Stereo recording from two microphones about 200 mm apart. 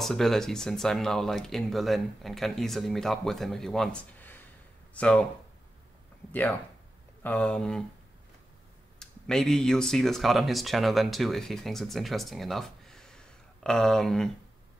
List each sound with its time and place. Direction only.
0.0 s speech: centre (ahead or behind)
7.2 s speech: 5° left (ahead or behind)
9.0 s speech: 5° left (ahead or behind)